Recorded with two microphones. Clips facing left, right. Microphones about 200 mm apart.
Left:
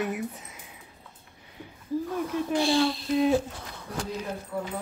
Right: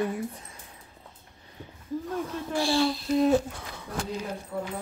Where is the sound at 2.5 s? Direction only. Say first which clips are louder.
Left 2 dB; 20° left (ahead or behind).